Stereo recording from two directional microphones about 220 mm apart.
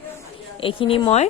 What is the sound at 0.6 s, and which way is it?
Speech, 25° left (ahead or behind).